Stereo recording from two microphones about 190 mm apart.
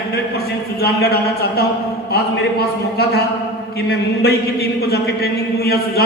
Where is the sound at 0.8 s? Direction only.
55° left (ahead or behind).